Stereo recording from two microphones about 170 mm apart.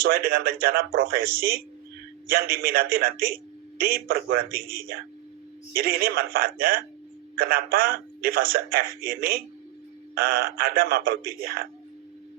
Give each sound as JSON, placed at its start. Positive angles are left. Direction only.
{"t": 0.0, "sound": "speech", "side_deg": -60}